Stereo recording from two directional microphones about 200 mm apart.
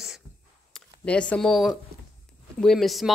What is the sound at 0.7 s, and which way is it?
Speech, 5° left (ahead or behind).